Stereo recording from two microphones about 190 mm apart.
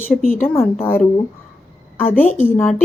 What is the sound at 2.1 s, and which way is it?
Speech, 10° left (ahead or behind).